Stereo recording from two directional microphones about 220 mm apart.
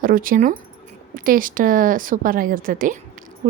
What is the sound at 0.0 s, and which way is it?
Speech, 40° right (ahead or behind).